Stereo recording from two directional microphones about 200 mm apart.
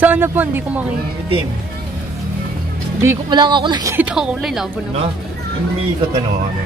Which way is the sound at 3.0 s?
15° right (ahead or behind).